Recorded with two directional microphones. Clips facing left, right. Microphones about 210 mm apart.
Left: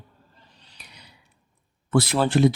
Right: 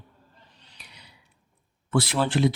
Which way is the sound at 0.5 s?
35° left (ahead or behind).